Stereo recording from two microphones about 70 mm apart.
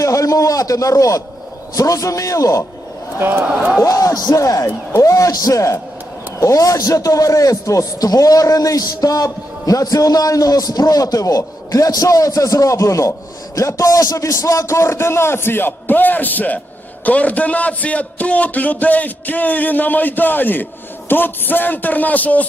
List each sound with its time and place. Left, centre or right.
0.0 s speech: left
3.2 s a man's voice: right
3.4 s speech: centre
3.8 s a man's voice: left